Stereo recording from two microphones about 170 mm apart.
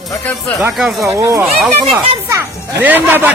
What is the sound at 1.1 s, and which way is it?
Speech, 15° right (ahead or behind).